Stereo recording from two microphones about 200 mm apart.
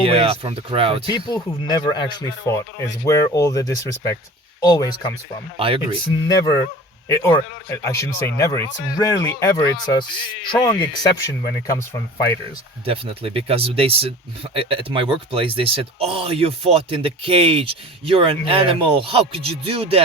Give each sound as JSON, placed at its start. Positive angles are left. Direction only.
{"t": 0.0, "sound": "speech", "side_deg": -30}
{"t": 1.0, "sound": "speech", "side_deg": 20}
{"t": 5.5, "sound": "speech", "side_deg": -25}
{"t": 6.1, "sound": "speech", "side_deg": 20}
{"t": 12.8, "sound": "speech", "side_deg": -30}